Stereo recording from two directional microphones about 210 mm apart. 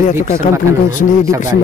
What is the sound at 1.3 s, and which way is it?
Speech, 15° right (ahead or behind).